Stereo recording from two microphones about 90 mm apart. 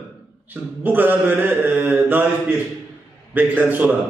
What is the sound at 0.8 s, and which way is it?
Mantra, 20° right (ahead or behind).